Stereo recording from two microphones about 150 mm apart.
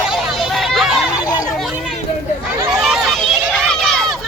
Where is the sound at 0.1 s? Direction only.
5° right (ahead or behind).